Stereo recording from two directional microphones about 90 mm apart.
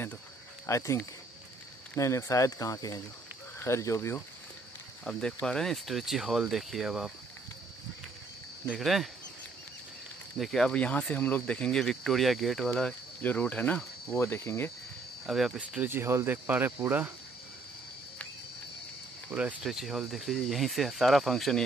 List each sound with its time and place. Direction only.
0.7 s speech: 35° left (ahead or behind)
5.0 s speech: 10° left (ahead or behind)
8.7 s speech: centre (ahead or behind)
10.3 s speech: centre (ahead or behind)
13.2 s speech: 20° left (ahead or behind)
15.2 s speech: 5° right (ahead or behind)
15.8 s cricket: 25° right (ahead or behind)
19.6 s speech: 5° right (ahead or behind)